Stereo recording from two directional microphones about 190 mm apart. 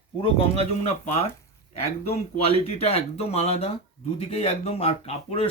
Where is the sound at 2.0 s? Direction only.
30° left (ahead or behind).